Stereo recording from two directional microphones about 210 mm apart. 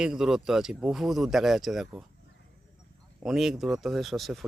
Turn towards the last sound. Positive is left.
turn(degrees=0)  # may be behind; listen again after turning